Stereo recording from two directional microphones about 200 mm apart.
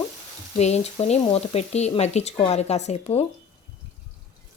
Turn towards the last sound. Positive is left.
turn(degrees=35)  # may be behind; listen again after turning